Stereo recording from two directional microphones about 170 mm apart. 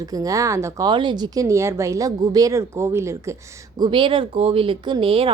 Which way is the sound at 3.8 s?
30° right (ahead or behind).